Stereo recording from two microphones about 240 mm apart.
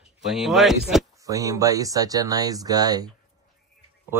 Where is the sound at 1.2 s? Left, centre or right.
Centre.